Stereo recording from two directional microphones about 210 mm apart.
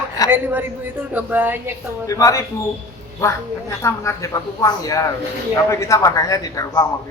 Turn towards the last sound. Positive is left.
turn(degrees=15)  # may be behind; listen again after turning